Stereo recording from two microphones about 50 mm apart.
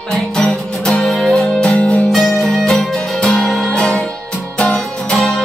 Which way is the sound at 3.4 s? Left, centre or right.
Centre.